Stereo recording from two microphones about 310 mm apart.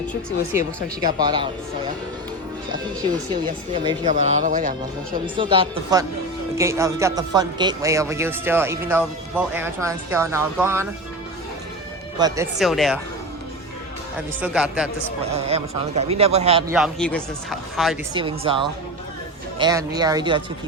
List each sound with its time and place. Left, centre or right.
1.0 s speech: centre
3.8 s a man's voice: right
12.2 s speech: centre
12.5 s speech: centre
14.2 s speech: centre
15.3 s a man's voice: centre
16.7 s speech: centre
18.1 s speech: centre